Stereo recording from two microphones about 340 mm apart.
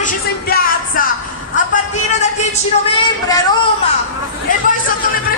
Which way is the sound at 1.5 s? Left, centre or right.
Left.